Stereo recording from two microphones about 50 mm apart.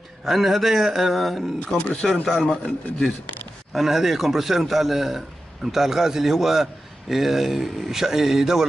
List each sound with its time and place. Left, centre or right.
0.2 s a man's voice: centre
1.8 s a man's voice: left
3.7 s a man's voice: centre